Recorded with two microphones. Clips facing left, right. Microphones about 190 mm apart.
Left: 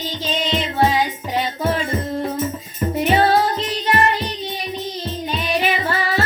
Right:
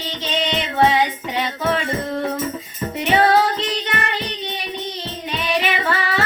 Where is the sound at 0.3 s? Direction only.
75° right (ahead or behind).